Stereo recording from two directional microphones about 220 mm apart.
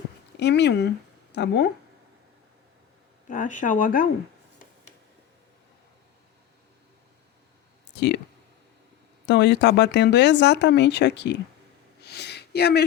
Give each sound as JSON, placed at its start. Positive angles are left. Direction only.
{"t": 0.3, "sound": "speech", "side_deg": 50}
{"t": 3.2, "sound": "speech", "side_deg": 35}
{"t": 7.9, "sound": "speech", "side_deg": 50}
{"t": 9.2, "sound": "speech", "side_deg": 50}
{"t": 12.0, "sound": "a sound", "side_deg": 50}